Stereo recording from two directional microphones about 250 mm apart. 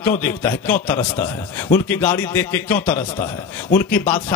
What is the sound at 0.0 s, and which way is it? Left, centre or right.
Speech, centre.